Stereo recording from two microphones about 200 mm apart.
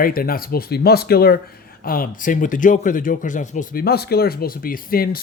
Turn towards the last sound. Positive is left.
turn(degrees=45)  # may be behind; listen again after turning